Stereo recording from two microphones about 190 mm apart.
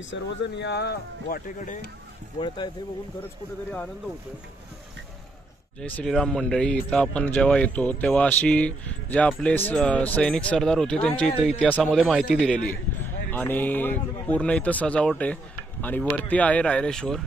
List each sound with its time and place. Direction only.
0.1 s speech: 65° left (ahead or behind)
2.4 s speech: 25° left (ahead or behind)
5.8 s speech: 5° left (ahead or behind)